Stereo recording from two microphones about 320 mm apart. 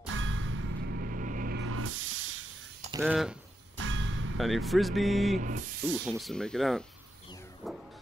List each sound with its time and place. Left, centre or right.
0.0 s clang: right
1.6 s spray: right
3.0 s speech: centre
3.7 s music: right
4.4 s speech: centre
5.3 s spray: right
6.0 s speech: centre
7.6 s vehicle: centre